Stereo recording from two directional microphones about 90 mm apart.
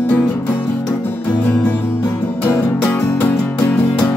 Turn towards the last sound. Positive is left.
turn(degrees=20)  # may be behind; listen again after turning